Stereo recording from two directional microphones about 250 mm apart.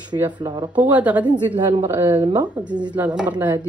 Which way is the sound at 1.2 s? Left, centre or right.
Centre.